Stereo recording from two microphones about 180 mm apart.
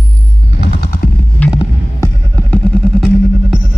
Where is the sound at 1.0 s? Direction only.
60° left (ahead or behind).